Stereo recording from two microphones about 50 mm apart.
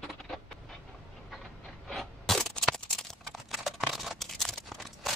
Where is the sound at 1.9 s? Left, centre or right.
Centre.